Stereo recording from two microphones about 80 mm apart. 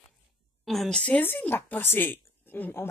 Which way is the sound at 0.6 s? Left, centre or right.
Centre.